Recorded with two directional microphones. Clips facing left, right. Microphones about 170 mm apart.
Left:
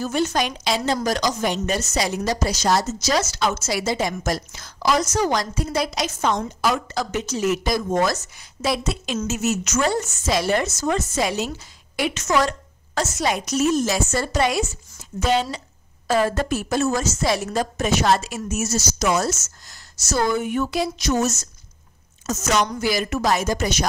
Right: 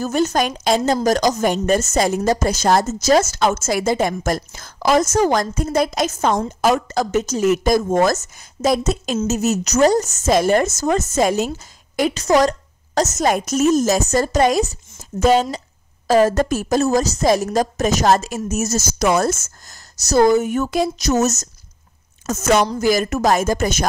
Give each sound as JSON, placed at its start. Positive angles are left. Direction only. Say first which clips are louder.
{"t": 0.0, "sound": "a woman's voice", "louder": "right 4 dB", "side_deg": -45}
{"t": 20.0, "sound": "speech", "louder": "right 8 dB", "side_deg": -40}
{"t": 22.2, "sound": "a woman's voice", "louder": "right 5 dB", "side_deg": -55}
{"t": 22.8, "sound": "a woman's voice", "louder": "right 5 dB", "side_deg": -45}